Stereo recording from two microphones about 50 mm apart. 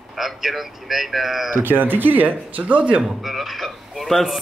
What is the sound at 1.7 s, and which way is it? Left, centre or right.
Speech, right.